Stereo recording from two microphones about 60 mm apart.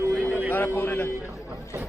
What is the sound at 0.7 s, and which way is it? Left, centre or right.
Speech, left.